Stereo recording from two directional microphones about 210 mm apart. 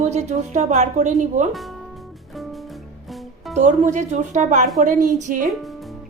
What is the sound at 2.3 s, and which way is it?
Music, centre (ahead or behind).